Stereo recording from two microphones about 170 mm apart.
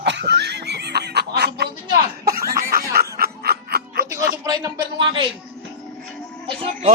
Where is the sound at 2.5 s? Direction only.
60° right (ahead or behind).